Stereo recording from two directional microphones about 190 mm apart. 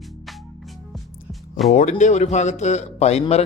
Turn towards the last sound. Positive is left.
turn(degrees=35)  # may be behind; listen again after turning